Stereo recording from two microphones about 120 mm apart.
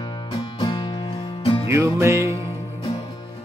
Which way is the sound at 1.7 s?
25° right (ahead or behind).